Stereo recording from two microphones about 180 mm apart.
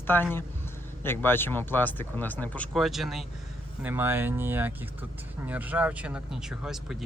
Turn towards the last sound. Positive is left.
turn(degrees=-5)  # may be behind; listen again after turning